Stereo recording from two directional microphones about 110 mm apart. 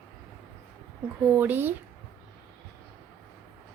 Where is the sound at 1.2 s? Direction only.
15° right (ahead or behind).